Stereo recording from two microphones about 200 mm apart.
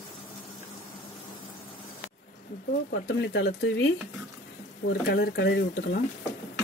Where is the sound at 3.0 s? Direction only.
60° left (ahead or behind).